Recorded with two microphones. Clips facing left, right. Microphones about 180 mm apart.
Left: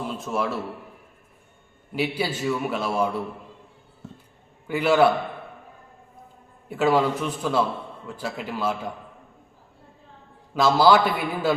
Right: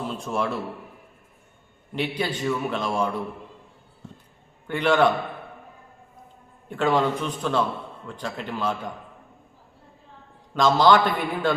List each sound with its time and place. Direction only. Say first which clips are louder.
0.0 s a man's voice: even; 5° left (ahead or behind)
2.0 s a man's voice: left 1 dB; 5° left (ahead or behind)
4.7 s a man's voice: left 1 dB; 5° left (ahead or behind)
6.7 s a man's voice: left 1 dB; 5° left (ahead or behind)
10.5 s a man's voice: even; 10° left (ahead or behind)